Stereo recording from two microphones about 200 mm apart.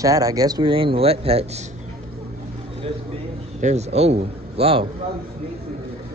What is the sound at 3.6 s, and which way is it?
A man's voice, 35° right (ahead or behind).